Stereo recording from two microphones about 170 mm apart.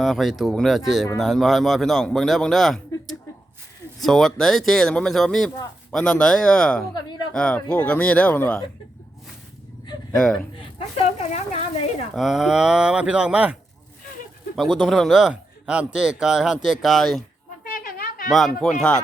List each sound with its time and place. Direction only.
0.0 s speech: centre (ahead or behind)
10.2 s speech: 5° left (ahead or behind)
10.6 s a sound: 35° left (ahead or behind)
12.1 s speech: centre (ahead or behind)
17.7 s a sound: 55° left (ahead or behind)
18.3 s speech: centre (ahead or behind)